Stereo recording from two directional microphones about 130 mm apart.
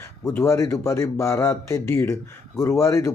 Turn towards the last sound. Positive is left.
turn(degrees=20)  # may be behind; listen again after turning